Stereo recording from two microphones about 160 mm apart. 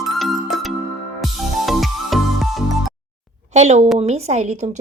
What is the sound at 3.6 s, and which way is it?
Speech, 45° right (ahead or behind).